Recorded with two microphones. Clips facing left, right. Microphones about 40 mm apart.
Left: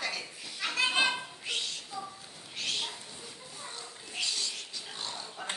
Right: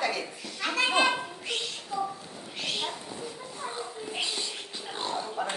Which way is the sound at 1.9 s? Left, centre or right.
Centre.